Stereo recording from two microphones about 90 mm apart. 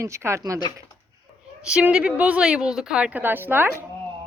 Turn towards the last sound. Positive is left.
turn(degrees=-25)  # may be behind; listen again after turning